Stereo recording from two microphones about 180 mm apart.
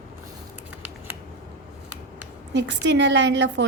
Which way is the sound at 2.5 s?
80° right.